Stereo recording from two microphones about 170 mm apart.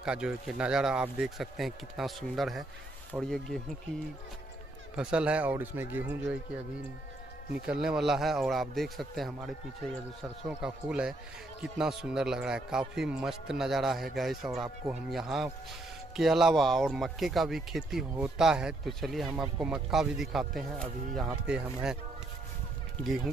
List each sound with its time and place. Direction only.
0.0 s speech: 5° right (ahead or behind)
4.9 s a man's voice: 5° right (ahead or behind)
7.6 s speech: 5° right (ahead or behind)